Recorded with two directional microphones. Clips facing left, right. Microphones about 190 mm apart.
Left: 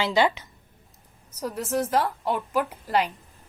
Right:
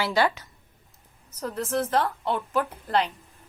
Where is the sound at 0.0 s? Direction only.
20° left (ahead or behind).